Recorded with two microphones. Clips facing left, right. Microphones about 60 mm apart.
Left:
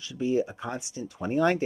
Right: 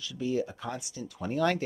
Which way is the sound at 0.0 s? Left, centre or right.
Left.